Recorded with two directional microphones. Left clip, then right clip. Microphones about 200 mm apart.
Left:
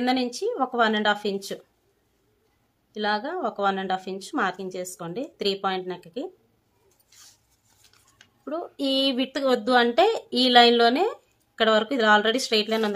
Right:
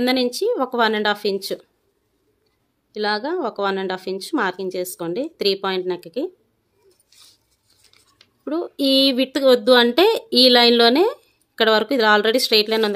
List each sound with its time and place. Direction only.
0.0 s speech: 45° right (ahead or behind)
2.9 s speech: 45° right (ahead or behind)
8.5 s speech: 45° right (ahead or behind)